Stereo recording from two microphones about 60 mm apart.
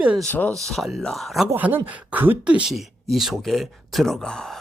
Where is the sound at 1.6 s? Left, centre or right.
Right.